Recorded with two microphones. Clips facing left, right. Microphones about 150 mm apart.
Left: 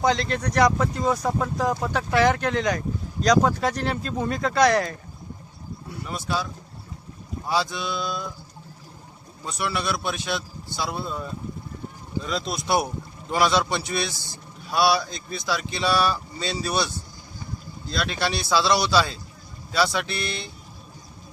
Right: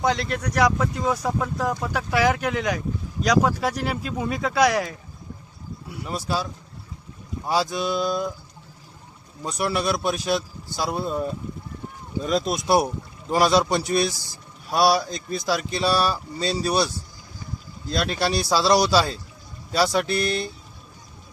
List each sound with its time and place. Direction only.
0.0 s speech: 5° right (ahead or behind)
6.1 s speech: 35° right (ahead or behind)
7.4 s speech: 40° right (ahead or behind)
9.4 s speech: 40° right (ahead or behind)
17.9 s speech: 40° right (ahead or behind)